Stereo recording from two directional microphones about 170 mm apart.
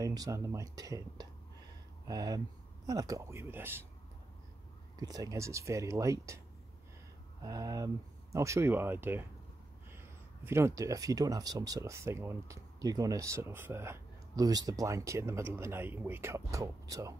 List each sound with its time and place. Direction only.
0.0 s speech: 20° right (ahead or behind)
4.9 s speech: 20° right (ahead or behind)
7.4 s speech: 20° right (ahead or behind)